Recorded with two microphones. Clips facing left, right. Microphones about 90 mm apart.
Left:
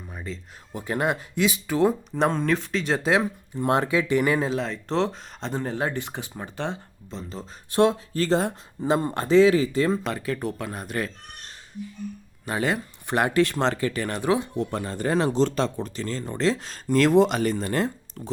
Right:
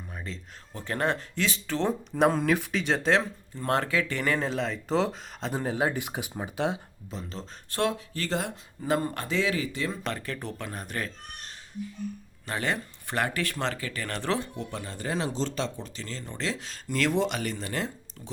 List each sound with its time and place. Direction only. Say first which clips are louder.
0.1 s speech: left 5 dB; 5° left (ahead or behind)
2.1 s speech: even; 5° right (ahead or behind)
7.7 s speech: left 8 dB; 20° left (ahead or behind)
7.9 s speech: left 8 dB; 35° left (ahead or behind)
10.0 s speech: left 6 dB; 5° left (ahead or behind)
12.5 s speech: left 5 dB; 10° left (ahead or behind); by 13.7 s 30° left (ahead or behind)
13.9 s speech: left 6 dB; 20° left (ahead or behind)
14.5 s speech: left 8 dB; 40° left (ahead or behind)